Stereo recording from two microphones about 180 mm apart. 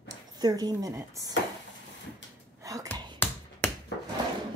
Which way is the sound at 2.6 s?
20° right (ahead or behind).